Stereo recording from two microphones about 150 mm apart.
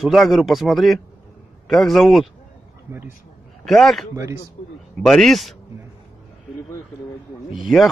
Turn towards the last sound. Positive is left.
turn(degrees=0)  # may be behind; listen again after turning